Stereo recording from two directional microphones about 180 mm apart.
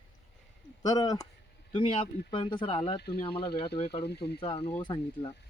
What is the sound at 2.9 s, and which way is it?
Speech, 65° left (ahead or behind).